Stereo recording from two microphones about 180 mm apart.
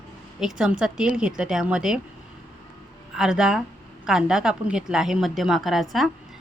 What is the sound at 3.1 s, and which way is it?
A woman's voice, 5° right (ahead or behind).